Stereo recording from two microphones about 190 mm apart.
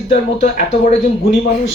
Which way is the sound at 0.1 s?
45° left (ahead or behind).